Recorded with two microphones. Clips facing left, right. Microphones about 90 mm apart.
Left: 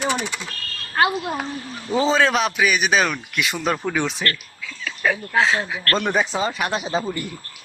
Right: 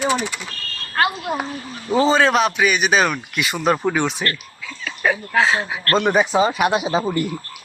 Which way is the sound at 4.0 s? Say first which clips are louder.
Right 2 dB; centre (ahead or behind).